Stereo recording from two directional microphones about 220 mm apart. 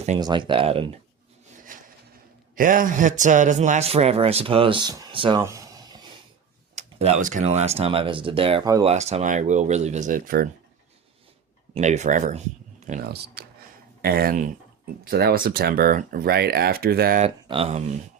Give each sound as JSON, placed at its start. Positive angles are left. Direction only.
{"t": 0.2, "sound": "a man's voice", "side_deg": -20}
{"t": 1.7, "sound": "a sound", "side_deg": -35}
{"t": 2.6, "sound": "a man's voice", "side_deg": -40}
{"t": 6.7, "sound": "a man's voice", "side_deg": -30}
{"t": 11.7, "sound": "speech", "side_deg": -30}
{"t": 13.4, "sound": "a sound", "side_deg": -45}
{"t": 14.0, "sound": "speech", "side_deg": -45}
{"t": 17.2, "sound": "a man's voice", "side_deg": -25}